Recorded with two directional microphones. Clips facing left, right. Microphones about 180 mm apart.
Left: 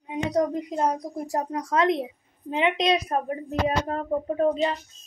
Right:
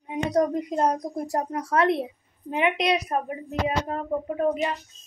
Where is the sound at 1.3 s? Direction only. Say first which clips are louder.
Left 1 dB; 20° left (ahead or behind).